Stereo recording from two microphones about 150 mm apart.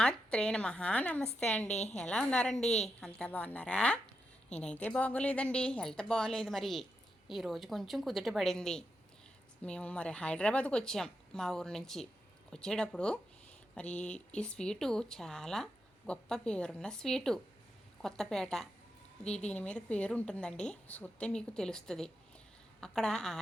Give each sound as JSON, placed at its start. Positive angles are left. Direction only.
{"t": 0.0, "sound": "a woman's voice", "side_deg": 5}
{"t": 1.6, "sound": "a woman's voice", "side_deg": 45}
{"t": 1.9, "sound": "a woman's voice", "side_deg": 5}